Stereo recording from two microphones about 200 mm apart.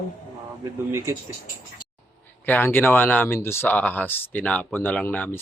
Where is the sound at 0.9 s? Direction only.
15° right (ahead or behind).